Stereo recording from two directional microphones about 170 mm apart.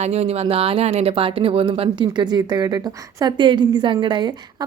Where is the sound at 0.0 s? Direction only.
40° right (ahead or behind).